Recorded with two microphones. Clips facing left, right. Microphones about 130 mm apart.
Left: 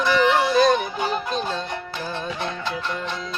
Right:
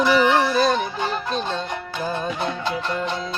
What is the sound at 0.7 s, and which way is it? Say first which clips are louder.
Music: left 1 dB; 15° left (ahead or behind).